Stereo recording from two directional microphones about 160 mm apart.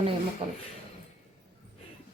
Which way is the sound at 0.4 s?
35° right (ahead or behind).